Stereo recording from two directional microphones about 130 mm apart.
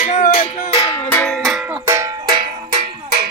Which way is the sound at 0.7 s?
25° left (ahead or behind).